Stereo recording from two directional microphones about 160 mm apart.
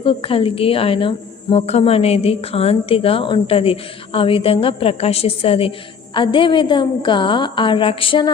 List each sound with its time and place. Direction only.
0.0 s speech: 35° left (ahead or behind)